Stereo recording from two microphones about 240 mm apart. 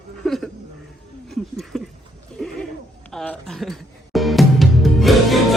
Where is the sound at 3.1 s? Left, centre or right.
Centre.